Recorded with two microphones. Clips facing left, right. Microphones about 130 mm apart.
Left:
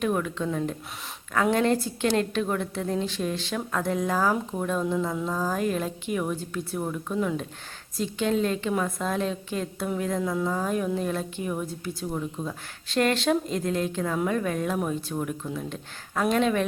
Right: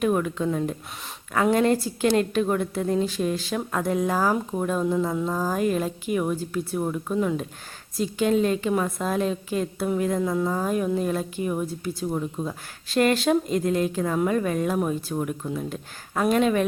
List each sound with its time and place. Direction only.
0.0 s a woman's voice: 5° right (ahead or behind)